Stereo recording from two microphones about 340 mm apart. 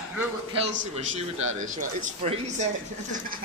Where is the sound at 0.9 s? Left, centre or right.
Centre.